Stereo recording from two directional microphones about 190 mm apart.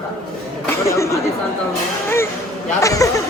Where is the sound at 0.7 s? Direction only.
15° left (ahead or behind).